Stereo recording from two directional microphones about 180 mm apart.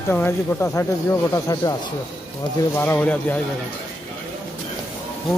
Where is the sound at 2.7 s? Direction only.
10° left (ahead or behind).